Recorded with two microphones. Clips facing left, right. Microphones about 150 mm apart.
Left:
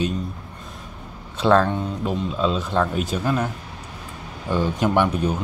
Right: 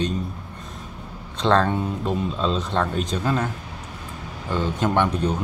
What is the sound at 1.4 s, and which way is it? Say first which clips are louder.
Speech: left 2 dB; 10° left (ahead or behind).